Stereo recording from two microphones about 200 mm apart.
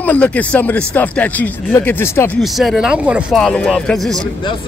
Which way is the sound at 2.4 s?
Centre (ahead or behind).